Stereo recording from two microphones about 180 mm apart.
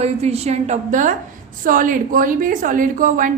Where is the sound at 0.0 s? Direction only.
35° right (ahead or behind).